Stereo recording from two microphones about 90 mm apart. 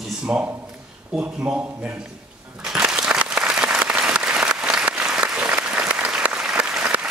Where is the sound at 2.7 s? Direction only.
10° right (ahead or behind).